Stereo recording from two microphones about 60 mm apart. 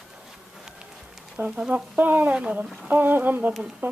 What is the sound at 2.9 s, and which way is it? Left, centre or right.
Humming, right.